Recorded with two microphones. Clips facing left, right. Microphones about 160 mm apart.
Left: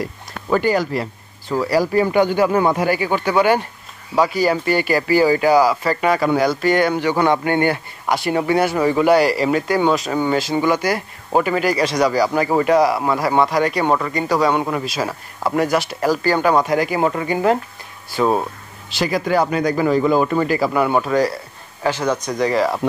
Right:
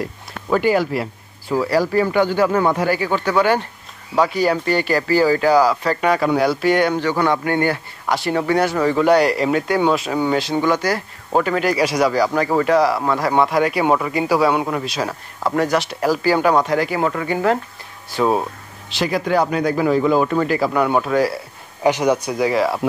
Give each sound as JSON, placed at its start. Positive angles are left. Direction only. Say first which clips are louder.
{"t": 0.0, "sound": "speech", "louder": "even", "side_deg": 0}
{"t": 1.7, "sound": "speech", "louder": "left 2 dB", "side_deg": 15}
{"t": 7.0, "sound": "speech", "louder": "left 2 dB", "side_deg": 15}
{"t": 11.8, "sound": "speech", "louder": "right 1 dB", "side_deg": -10}
{"t": 12.1, "sound": "speech", "louder": "even", "side_deg": 5}
{"t": 16.6, "sound": "speech", "louder": "left 1 dB", "side_deg": 15}
{"t": 18.1, "sound": "speech", "louder": "even", "side_deg": 0}
{"t": 21.8, "sound": "speech", "louder": "right 3 dB", "side_deg": -15}